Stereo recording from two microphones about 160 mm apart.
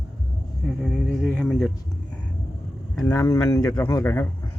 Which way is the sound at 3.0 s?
15° left (ahead or behind).